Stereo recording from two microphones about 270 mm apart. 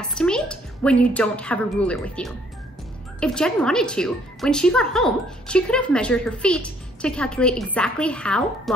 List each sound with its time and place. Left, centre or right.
0.2 s a woman's voice: centre